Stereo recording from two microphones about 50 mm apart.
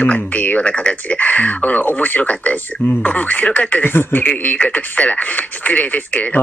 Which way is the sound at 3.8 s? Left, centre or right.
Left.